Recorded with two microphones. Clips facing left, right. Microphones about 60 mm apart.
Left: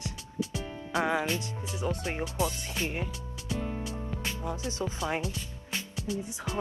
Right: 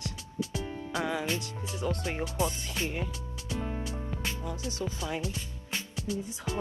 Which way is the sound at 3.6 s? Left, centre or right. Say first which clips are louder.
Right 1 dB; centre.